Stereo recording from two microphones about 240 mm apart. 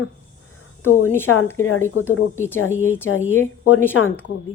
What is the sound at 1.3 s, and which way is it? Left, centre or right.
Speech, left.